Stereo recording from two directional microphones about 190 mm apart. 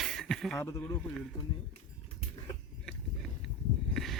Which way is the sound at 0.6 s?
15° left (ahead or behind).